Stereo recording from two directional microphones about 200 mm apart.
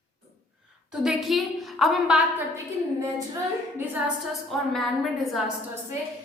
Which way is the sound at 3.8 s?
5° right (ahead or behind).